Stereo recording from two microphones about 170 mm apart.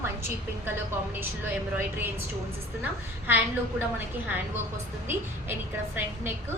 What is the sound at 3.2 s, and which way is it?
A woman's voice, 10° right (ahead or behind).